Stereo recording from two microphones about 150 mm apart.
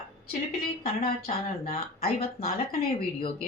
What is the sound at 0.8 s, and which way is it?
Speech, 45° left (ahead or behind).